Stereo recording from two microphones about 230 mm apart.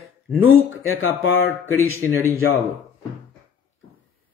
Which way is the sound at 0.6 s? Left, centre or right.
Left.